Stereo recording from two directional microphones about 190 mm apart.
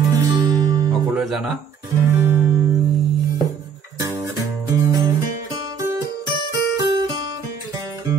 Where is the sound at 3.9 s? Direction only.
15° right (ahead or behind).